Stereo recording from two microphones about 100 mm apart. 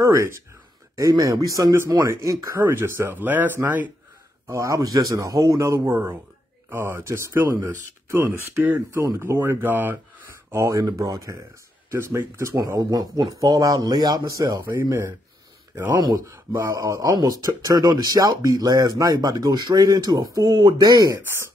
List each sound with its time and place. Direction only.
0.0 s speech: 30° right (ahead or behind)
4.5 s speech: 30° right (ahead or behind)
10.5 s speech: 30° right (ahead or behind)
14.8 s speech: 25° right (ahead or behind)
15.9 s speech: 40° right (ahead or behind)